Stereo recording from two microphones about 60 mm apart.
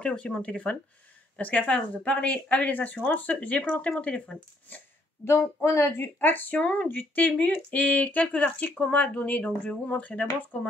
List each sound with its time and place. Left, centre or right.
0.0 s speech: centre
5.2 s speech: left
6.1 s speech: left